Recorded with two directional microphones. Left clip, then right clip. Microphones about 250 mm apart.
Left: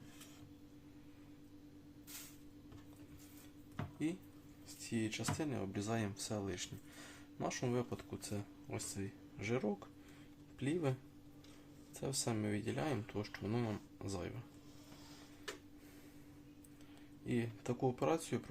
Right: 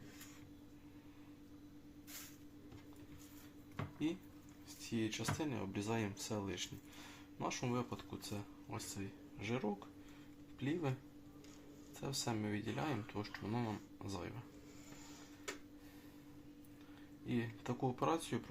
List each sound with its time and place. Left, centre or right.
4.9 s speech: left
11.9 s speech: left
17.2 s speech: left